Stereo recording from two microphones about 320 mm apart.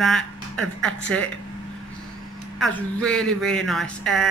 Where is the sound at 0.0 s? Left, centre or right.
Centre.